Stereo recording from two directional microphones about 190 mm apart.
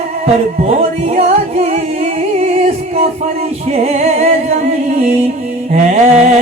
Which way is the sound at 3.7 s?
35° right (ahead or behind).